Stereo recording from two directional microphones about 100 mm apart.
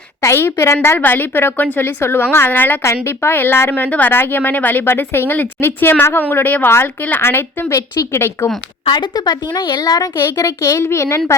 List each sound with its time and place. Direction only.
0.2 s a woman's voice: 25° left (ahead or behind)
8.9 s a woman's voice: 50° left (ahead or behind)
10.2 s a woman's voice: 25° left (ahead or behind)